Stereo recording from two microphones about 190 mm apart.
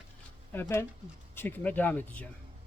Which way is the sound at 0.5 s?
10° left (ahead or behind).